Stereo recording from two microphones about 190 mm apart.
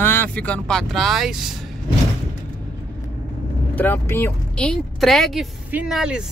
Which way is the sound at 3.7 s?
10° left (ahead or behind).